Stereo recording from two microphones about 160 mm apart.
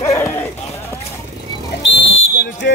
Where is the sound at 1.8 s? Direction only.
90° left.